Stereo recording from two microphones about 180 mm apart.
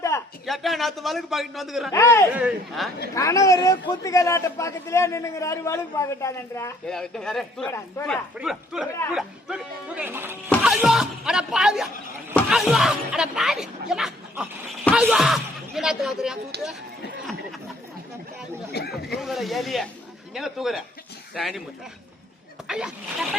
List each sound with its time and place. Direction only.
0.1 s a sound: 15° left (ahead or behind)
0.4 s a man's voice: centre (ahead or behind)
1.9 s a man's voice: 15° left (ahead or behind)
2.3 s a man's voice: 5° right (ahead or behind)
3.2 s a man's voice: 15° left (ahead or behind)
6.8 s a man's voice: 5° left (ahead or behind)
7.7 s a man's voice: 15° left (ahead or behind)
8.1 s a man's voice: centre (ahead or behind)
10.5 s a man's voice: centre (ahead or behind)
18.7 s speech: 65° left (ahead or behind)
19.2 s a man's voice: centre (ahead or behind)
22.6 s a man's voice: 5° right (ahead or behind)